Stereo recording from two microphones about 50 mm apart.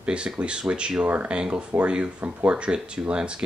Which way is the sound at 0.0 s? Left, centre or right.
Right.